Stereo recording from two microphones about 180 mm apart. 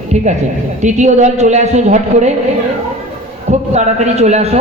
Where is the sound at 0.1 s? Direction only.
40° right (ahead or behind).